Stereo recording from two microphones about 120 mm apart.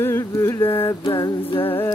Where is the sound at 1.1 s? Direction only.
40° left (ahead or behind).